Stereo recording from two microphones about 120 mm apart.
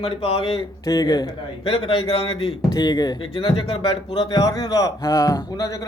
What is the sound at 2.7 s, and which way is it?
Speech, 35° left (ahead or behind).